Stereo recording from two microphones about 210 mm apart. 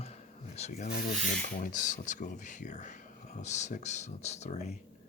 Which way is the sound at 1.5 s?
40° left (ahead or behind).